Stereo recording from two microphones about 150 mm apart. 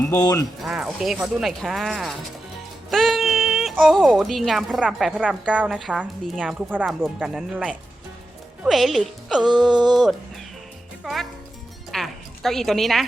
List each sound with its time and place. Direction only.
0.6 s speech: centre (ahead or behind)
9.4 s music: 30° right (ahead or behind)
9.9 s speech: centre (ahead or behind)
11.9 s music: centre (ahead or behind)